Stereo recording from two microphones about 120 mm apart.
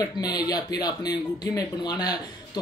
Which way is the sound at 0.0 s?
30° left (ahead or behind).